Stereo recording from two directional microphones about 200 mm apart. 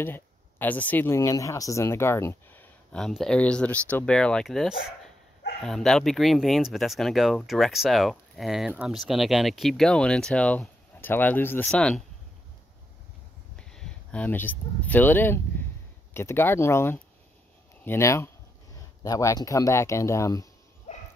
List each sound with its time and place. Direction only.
0.0 s speech: 10° left (ahead or behind)
13.6 s speech: 5° left (ahead or behind)
20.9 s dog: 35° left (ahead or behind)